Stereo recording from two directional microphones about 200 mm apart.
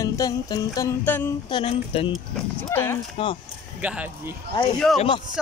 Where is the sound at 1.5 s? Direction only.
25° left (ahead or behind).